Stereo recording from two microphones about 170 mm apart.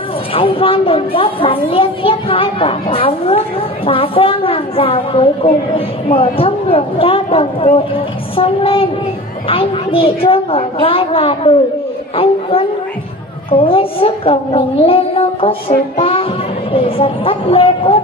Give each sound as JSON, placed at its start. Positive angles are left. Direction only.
{"t": 0.3, "sound": "a child's voice", "side_deg": 30}